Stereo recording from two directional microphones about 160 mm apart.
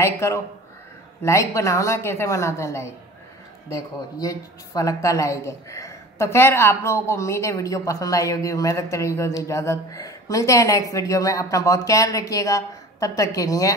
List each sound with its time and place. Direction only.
0.0 s speech: 20° left (ahead or behind)